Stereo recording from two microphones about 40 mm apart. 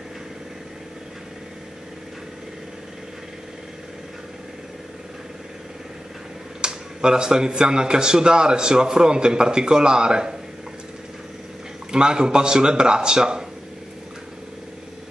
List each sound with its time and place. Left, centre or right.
6.6 s a man's voice: centre
11.9 s a man's voice: centre